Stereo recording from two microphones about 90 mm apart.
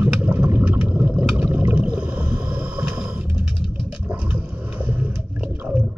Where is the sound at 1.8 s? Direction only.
10° right (ahead or behind).